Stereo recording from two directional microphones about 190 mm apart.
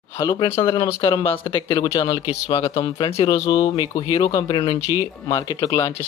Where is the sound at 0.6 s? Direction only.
30° left (ahead or behind).